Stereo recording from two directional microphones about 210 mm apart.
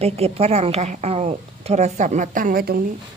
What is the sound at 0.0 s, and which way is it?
A woman's voice, 30° right (ahead or behind).